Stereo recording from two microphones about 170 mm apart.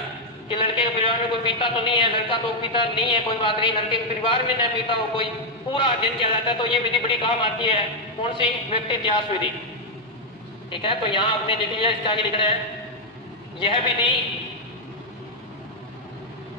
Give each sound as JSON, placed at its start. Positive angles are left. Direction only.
{"t": 0.5, "sound": "a man's voice", "side_deg": 30}
{"t": 10.7, "sound": "a woman's voice", "side_deg": 30}
{"t": 13.6, "sound": "a woman's voice", "side_deg": 30}